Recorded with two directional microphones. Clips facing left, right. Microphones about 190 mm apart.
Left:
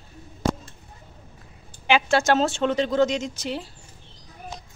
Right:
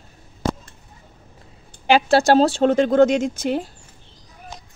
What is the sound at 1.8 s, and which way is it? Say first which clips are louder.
Speech: right 5 dB; 35° right (ahead or behind).